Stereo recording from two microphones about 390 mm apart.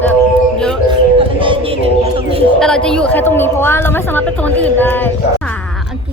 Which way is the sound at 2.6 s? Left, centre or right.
Centre.